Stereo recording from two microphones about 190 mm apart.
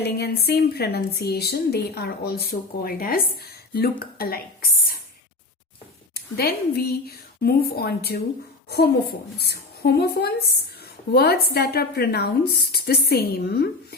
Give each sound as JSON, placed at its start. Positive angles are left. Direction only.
{"t": 0.0, "sound": "a woman's voice", "side_deg": 60}
{"t": 6.1, "sound": "a woman's voice", "side_deg": 55}